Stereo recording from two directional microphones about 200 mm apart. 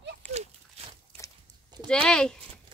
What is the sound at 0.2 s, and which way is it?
Walk, 10° left (ahead or behind).